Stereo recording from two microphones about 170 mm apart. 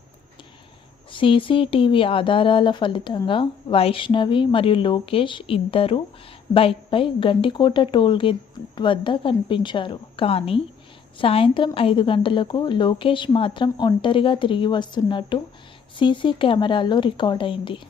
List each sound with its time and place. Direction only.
1.1 s a woman's voice: 30° left (ahead or behind)